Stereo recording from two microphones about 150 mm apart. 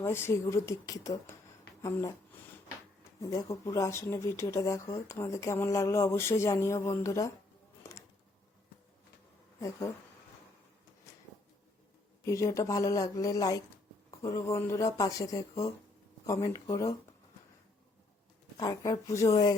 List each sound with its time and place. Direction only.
0.0 s speech: 15° left (ahead or behind)
3.2 s speech: 20° left (ahead or behind)
9.6 s speech: 20° left (ahead or behind)
12.2 s speech: 20° left (ahead or behind)
18.5 s speech: 25° left (ahead or behind)